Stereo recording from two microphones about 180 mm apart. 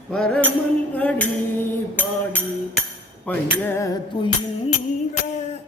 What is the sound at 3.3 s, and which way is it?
Speech, 10° left (ahead or behind).